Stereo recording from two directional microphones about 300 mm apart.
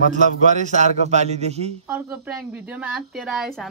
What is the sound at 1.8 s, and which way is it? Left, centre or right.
Speech, centre.